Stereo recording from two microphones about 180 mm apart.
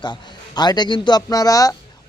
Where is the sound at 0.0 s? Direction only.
25° left (ahead or behind).